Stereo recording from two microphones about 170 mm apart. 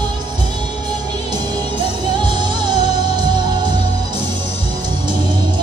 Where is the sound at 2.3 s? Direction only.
25° right (ahead or behind).